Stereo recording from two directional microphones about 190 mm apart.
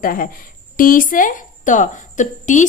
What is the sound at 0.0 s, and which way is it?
A woman's voice, 45° left (ahead or behind).